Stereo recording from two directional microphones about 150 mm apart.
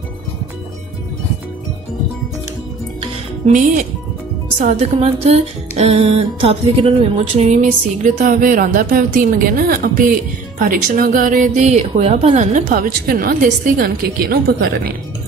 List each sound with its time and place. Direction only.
3.4 s speech: 60° right (ahead or behind)
4.6 s a woman's voice: 45° right (ahead or behind)
8.0 s a woman's voice: 60° right (ahead or behind); by 14.9 s 90° right